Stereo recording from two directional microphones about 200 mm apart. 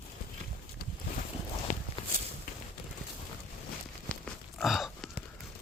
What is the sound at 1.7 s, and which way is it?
Walk, 40° left (ahead or behind).